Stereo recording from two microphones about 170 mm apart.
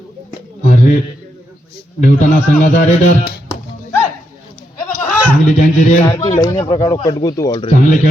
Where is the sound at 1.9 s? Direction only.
50° left (ahead or behind).